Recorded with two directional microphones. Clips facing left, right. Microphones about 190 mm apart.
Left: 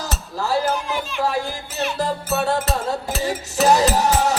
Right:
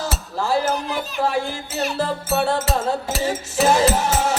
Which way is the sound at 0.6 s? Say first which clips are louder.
Even; 40° right (ahead or behind).